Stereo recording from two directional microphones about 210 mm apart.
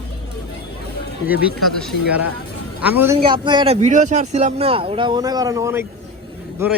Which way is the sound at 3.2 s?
25° right (ahead or behind).